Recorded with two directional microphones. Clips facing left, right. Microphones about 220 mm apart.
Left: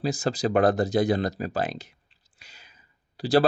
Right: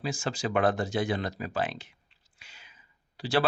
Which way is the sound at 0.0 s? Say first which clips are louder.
Left 6 dB; 40° left (ahead or behind).